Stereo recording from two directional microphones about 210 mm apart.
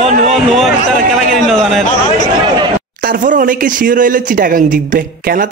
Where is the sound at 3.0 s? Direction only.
40° right (ahead or behind).